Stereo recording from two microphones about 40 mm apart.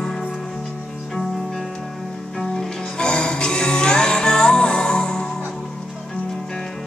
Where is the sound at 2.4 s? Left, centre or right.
Centre.